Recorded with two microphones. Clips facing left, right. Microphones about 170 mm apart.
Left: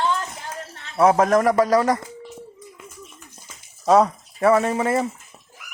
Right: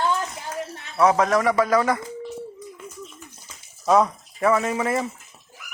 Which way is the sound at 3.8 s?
35° left (ahead or behind).